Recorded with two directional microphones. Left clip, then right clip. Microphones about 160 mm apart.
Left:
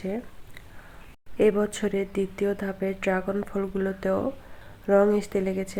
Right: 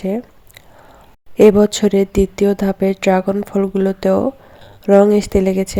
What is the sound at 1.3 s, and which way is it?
Speech, 50° right (ahead or behind).